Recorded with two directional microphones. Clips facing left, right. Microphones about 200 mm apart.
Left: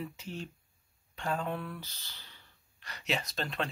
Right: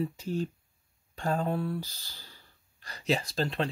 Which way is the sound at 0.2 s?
40° right (ahead or behind).